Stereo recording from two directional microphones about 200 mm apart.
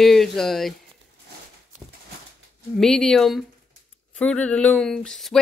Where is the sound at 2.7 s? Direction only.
5° left (ahead or behind).